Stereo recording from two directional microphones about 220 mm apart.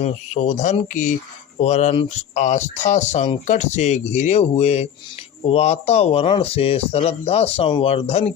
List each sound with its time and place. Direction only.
0.0 s speech: 30° left (ahead or behind)